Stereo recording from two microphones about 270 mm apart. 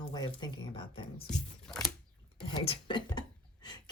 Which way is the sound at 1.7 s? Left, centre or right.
Centre.